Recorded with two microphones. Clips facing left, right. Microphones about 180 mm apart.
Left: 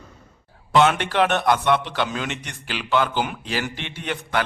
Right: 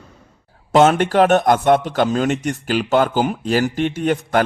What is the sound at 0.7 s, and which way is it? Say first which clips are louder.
A man's voice: right 5 dB; 45° right (ahead or behind).